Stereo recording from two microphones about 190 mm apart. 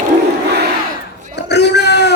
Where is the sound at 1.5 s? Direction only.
60° left (ahead or behind).